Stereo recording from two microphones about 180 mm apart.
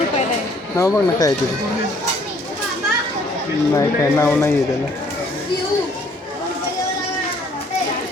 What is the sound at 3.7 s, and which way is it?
Speech, 15° left (ahead or behind).